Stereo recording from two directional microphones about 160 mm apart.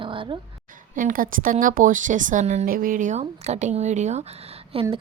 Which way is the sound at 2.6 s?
60° right (ahead or behind).